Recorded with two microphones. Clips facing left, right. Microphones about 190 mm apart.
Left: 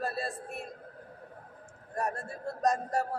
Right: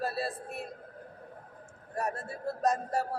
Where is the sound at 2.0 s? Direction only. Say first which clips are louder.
Even; 5° right (ahead or behind).